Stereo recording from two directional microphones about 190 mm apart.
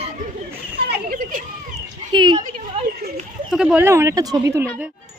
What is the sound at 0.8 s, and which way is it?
Children playing, 55° right (ahead or behind).